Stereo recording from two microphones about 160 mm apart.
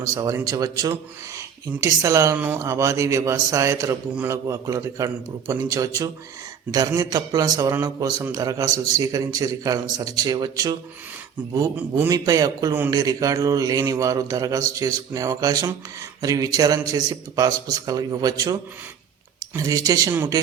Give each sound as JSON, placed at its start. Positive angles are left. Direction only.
{"t": 0.0, "sound": "a man's voice", "side_deg": -20}
{"t": 11.8, "sound": "a man's voice", "side_deg": -10}
{"t": 12.1, "sound": "a man's voice", "side_deg": -25}
{"t": 19.5, "sound": "a man's voice", "side_deg": -20}